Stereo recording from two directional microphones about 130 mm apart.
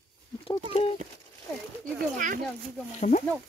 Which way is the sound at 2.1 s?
90° right.